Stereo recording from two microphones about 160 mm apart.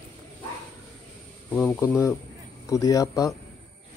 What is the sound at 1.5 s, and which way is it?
Speech, 15° left (ahead or behind).